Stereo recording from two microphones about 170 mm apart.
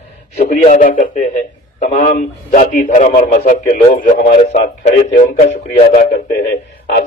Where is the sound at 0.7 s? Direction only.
50° left (ahead or behind).